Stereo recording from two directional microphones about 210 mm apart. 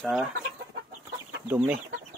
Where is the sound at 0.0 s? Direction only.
Centre (ahead or behind).